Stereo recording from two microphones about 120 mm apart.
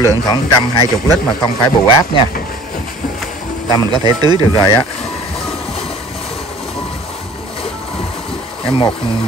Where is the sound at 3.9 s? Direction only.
35° right (ahead or behind).